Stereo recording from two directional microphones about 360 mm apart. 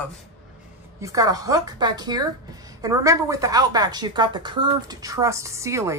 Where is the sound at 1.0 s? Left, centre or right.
Centre.